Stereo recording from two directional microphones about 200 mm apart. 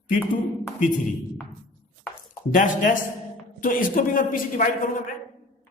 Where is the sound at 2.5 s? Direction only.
40° left (ahead or behind).